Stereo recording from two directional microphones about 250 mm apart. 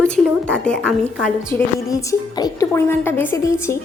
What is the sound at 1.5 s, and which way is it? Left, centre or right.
A woman's voice, centre.